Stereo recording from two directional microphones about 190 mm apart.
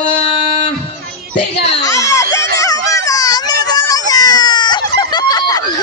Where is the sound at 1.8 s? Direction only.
15° left (ahead or behind).